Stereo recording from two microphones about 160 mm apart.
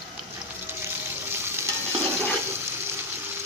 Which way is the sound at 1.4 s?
15° right (ahead or behind).